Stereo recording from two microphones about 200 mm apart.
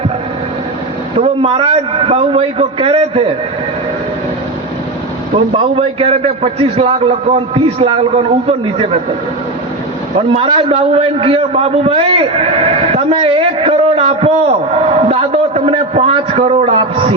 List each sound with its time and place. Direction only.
1.2 s a man's voice: 30° right (ahead or behind)
5.7 s a man's voice: 30° right (ahead or behind)
10.2 s a man's voice: 25° right (ahead or behind)
14.8 s a sound: 30° right (ahead or behind)